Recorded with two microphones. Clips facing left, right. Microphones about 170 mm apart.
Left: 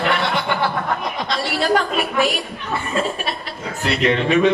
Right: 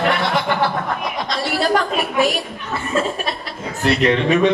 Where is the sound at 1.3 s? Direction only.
40° right (ahead or behind).